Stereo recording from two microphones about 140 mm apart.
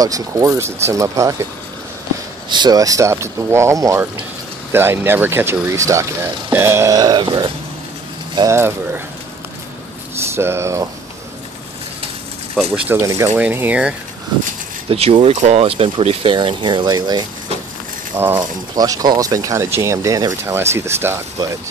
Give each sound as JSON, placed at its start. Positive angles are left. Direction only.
{"t": 0.0, "sound": "speech", "side_deg": -25}
{"t": 2.5, "sound": "speech", "side_deg": -30}
{"t": 8.5, "sound": "speech", "side_deg": -15}
{"t": 10.3, "sound": "speech", "side_deg": -20}
{"t": 12.7, "sound": "speech", "side_deg": -10}
{"t": 13.0, "sound": "speech", "side_deg": -20}
{"t": 14.9, "sound": "speech", "side_deg": -45}
{"t": 18.2, "sound": "speech", "side_deg": -15}
{"t": 18.8, "sound": "speech", "side_deg": -25}